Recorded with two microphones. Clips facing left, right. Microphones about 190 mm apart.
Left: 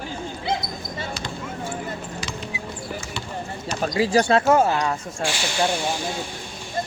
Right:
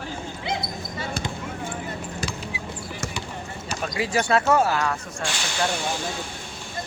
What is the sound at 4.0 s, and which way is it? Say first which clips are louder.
Speech: left 4 dB; 30° left (ahead or behind).